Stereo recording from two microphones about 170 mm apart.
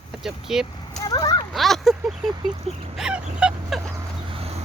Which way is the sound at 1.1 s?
25° left (ahead or behind).